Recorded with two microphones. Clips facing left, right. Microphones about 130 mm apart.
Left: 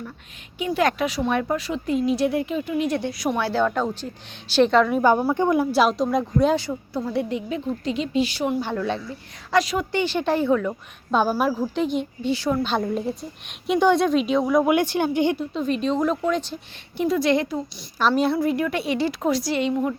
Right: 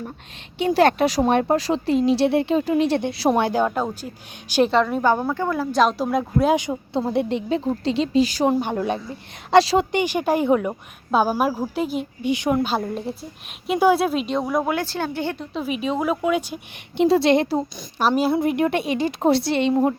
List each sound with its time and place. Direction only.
0.8 s a woman's voice: 30° right (ahead or behind)
3.4 s a woman's voice: 15° right (ahead or behind); by 5.0 s centre (ahead or behind)
5.0 s a woman's voice: 10° left (ahead or behind)
5.8 s a woman's voice: centre (ahead or behind); by 8.6 s 35° right (ahead or behind)
8.9 s a woman's voice: 25° right (ahead or behind)
9.9 s a woman's voice: 15° right (ahead or behind)
11.1 s a woman's voice: 5° right (ahead or behind)
12.3 s a woman's voice: 15° right (ahead or behind)
12.6 s a woman's voice: centre (ahead or behind)
14.7 s a woman's voice: 15° left (ahead or behind)
15.5 s a woman's voice: 5° right (ahead or behind)
17.0 s a woman's voice: 25° right (ahead or behind)
18.0 s a woman's voice: 15° right (ahead or behind); by 20.0 s 35° right (ahead or behind)